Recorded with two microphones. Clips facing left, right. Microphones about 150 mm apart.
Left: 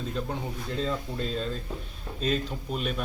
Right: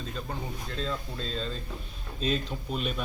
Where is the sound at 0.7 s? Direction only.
15° left (ahead or behind).